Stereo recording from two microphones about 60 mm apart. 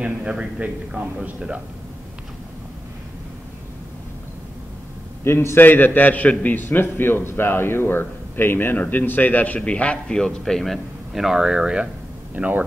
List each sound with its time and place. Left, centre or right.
0.0 s a man's voice: centre
5.2 s a man's voice: left
5.7 s a man's voice: left; by 11.9 s centre
12.4 s a man's voice: right